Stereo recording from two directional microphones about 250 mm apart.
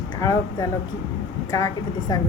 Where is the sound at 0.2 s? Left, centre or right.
Centre.